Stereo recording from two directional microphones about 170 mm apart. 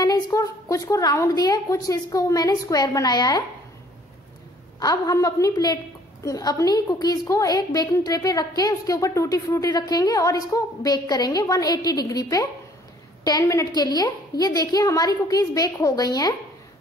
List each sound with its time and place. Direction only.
0.0 s a woman's voice: 25° left (ahead or behind)
4.7 s a woman's voice: 20° left (ahead or behind)